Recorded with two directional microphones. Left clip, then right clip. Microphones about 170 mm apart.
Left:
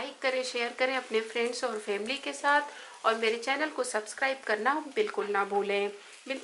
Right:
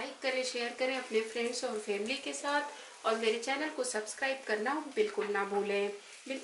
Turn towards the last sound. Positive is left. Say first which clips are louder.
# left 4 dB
turn(degrees=20)  # may be behind; listen again after turning